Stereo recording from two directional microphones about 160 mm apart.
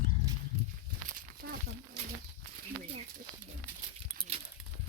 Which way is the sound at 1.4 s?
90° right.